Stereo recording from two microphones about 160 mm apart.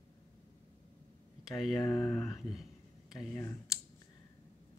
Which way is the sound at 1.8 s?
20° left (ahead or behind).